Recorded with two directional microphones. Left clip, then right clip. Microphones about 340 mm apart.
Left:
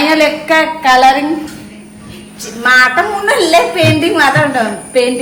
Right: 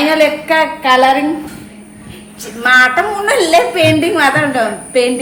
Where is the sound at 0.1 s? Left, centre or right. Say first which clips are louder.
Left 1 dB; centre.